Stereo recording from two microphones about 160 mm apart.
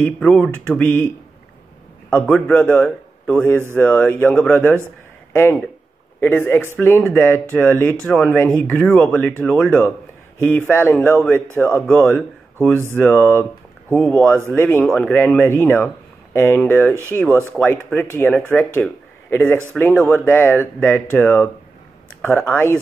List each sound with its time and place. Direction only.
0.0 s a man's voice: 5° left (ahead or behind)
14.5 s speech: 15° left (ahead or behind)
17.3 s speech: 15° right (ahead or behind)
17.6 s speech: 10° left (ahead or behind)